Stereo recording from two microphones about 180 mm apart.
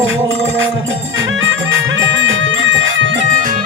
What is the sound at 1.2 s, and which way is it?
Music, 90° right.